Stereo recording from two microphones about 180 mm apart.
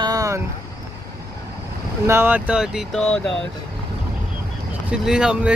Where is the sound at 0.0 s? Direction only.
20° right (ahead or behind).